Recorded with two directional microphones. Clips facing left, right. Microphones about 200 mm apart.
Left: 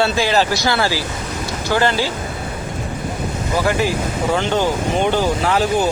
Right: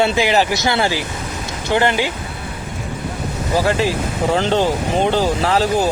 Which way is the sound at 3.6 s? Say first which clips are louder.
Left 2 dB; 30° right (ahead or behind).